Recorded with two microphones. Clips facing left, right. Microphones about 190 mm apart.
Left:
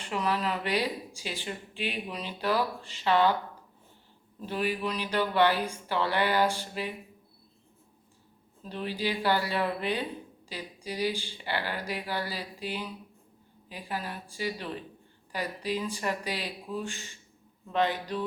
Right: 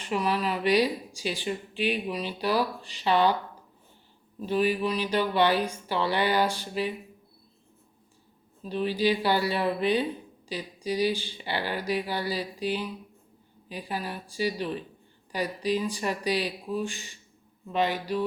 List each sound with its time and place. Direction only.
0.0 s speech: 15° right (ahead or behind)
4.4 s speech: 15° right (ahead or behind)
9.0 s speech: 15° right (ahead or behind)